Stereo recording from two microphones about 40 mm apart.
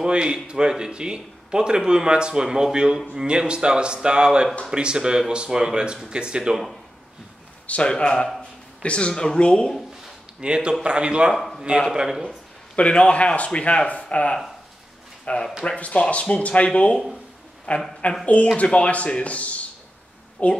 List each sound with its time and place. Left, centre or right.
0.0 s speech: right
7.6 s speech: left
7.9 s speech: left
8.4 s a sound: left
9.1 s speech: centre
10.4 s speech: right
11.3 s speech: centre
11.9 s speech: centre
12.7 s speech: left